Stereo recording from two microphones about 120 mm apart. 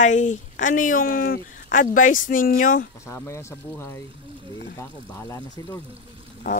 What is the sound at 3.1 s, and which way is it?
Speech, 25° left (ahead or behind).